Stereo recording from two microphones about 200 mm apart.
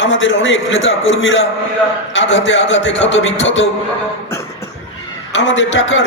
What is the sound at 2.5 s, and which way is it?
A man's voice, 65° left (ahead or behind).